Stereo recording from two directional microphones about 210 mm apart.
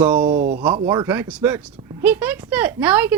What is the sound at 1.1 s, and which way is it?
Speech, 10° right (ahead or behind).